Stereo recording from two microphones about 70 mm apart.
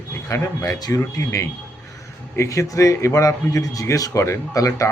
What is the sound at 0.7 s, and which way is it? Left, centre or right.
Speech, left.